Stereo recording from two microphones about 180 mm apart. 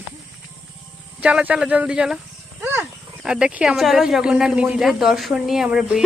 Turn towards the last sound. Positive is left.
turn(degrees=-5)  # may be behind; listen again after turning